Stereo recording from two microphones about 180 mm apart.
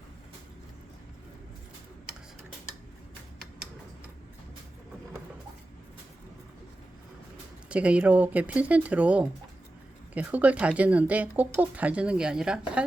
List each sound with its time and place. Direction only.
7.7 s speech: 5° right (ahead or behind)